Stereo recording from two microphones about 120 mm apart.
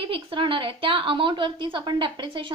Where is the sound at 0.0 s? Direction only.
50° right (ahead or behind).